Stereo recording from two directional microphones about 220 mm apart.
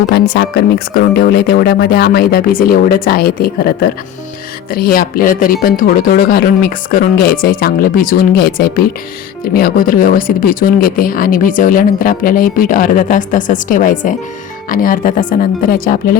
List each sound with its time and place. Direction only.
0.1 s speech: 45° left (ahead or behind)